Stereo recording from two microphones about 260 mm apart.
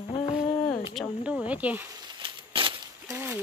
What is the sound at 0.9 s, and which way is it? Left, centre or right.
Speech, centre.